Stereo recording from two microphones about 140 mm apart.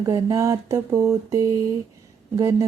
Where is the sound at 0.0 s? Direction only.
25° right (ahead or behind).